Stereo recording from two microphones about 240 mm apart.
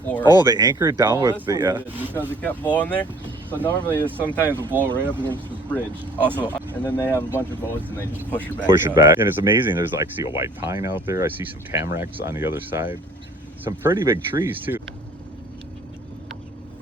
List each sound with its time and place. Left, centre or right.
0.1 s speech: centre
0.4 s speech: centre
2.4 s speech: centre
4.4 s speech: centre
5.2 s speech: centre
8.3 s speech: centre
8.6 s speech: centre